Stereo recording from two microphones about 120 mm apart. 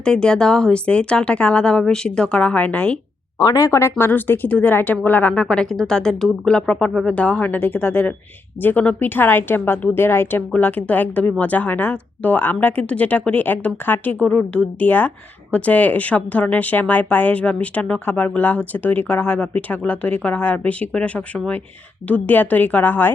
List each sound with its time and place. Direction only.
0.0 s speech: 5° left (ahead or behind)
3.3 s speech: 30° left (ahead or behind); by 23.1 s 15° left (ahead or behind)